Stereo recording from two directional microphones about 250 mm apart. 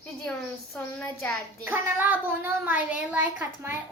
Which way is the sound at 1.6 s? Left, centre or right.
Centre.